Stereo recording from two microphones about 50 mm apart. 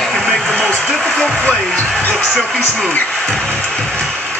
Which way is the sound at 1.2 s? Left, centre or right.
Centre.